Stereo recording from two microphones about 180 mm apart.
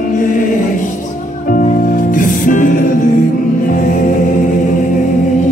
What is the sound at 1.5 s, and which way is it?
Music, 50° left (ahead or behind).